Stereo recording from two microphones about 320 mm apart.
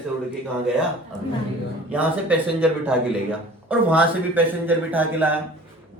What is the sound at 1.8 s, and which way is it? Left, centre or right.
Speech, centre.